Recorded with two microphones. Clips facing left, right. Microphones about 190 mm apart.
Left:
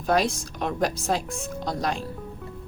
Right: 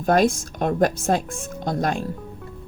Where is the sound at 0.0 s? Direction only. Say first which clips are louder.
Right 5 dB; 50° right (ahead or behind).